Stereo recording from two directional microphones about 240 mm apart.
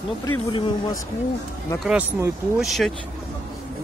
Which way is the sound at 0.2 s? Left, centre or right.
Centre.